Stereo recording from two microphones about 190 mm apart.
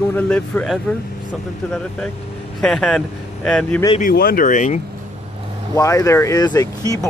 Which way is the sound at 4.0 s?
50° left (ahead or behind).